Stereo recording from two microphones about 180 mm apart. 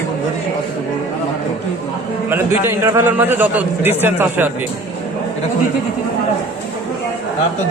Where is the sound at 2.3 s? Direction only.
10° right (ahead or behind).